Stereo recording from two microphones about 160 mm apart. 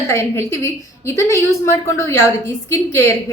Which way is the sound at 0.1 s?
15° left (ahead or behind).